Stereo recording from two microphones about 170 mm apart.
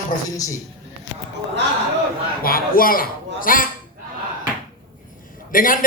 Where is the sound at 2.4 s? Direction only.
60° left (ahead or behind).